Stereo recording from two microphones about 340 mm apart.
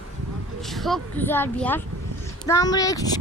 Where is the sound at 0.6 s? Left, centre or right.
Centre.